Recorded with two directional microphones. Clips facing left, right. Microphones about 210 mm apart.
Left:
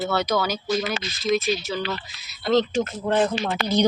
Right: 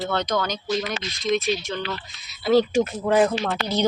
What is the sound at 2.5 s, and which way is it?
Speech, 10° right (ahead or behind).